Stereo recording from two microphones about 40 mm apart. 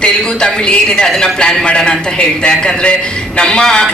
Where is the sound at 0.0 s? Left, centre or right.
Left.